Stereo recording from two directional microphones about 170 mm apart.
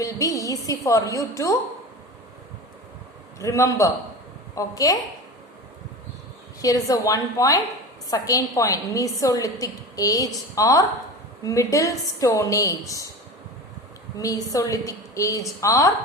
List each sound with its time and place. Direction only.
0.0 s a woman's voice: 20° left (ahead or behind)
3.3 s a man's voice: 15° left (ahead or behind)
6.6 s a woman's voice: 20° left (ahead or behind)
14.2 s a woman's voice: 20° left (ahead or behind)